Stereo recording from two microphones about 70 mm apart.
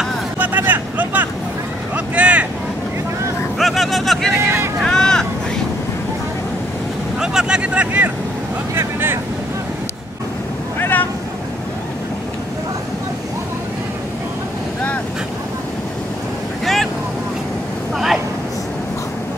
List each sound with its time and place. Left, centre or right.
0.4 s vehicle: right
3.5 s a sound: centre
4.8 s vehicle: centre
7.2 s vehicle: centre
8.7 s vehicle: right
10.8 s vehicle: left
16.6 s boat: centre
17.9 s a sound: centre